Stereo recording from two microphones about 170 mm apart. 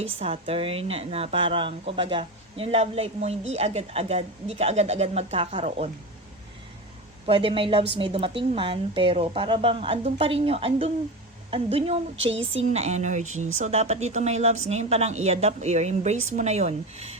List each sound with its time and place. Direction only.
0.2 s speech: 35° right (ahead or behind)
7.3 s speech: 30° right (ahead or behind)
12.1 s speech: 90° right
12.4 s speech: 40° right (ahead or behind)